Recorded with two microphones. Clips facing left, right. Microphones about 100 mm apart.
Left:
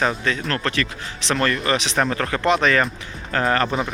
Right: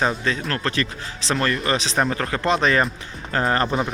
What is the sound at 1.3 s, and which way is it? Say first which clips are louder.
Speech: left 1 dB; centre (ahead or behind).